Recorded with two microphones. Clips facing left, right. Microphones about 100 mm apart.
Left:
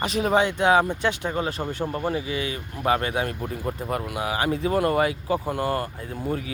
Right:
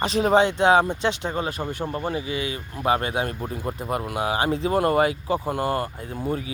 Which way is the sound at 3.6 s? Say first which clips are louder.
Left 2 dB; 10° right (ahead or behind).